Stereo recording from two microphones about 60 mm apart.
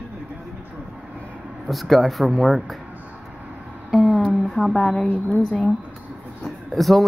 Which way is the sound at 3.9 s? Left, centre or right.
Centre.